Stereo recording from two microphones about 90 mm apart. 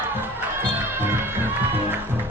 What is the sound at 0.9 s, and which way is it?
Music, 25° right (ahead or behind).